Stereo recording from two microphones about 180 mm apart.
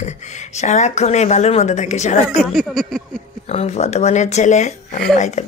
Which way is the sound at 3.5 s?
35° left (ahead or behind).